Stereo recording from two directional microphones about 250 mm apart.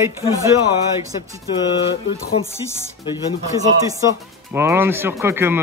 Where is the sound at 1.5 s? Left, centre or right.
Centre.